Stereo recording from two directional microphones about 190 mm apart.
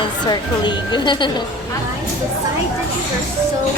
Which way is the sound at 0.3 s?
25° left (ahead or behind).